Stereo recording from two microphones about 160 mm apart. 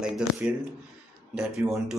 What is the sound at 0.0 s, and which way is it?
Speech, 5° right (ahead or behind).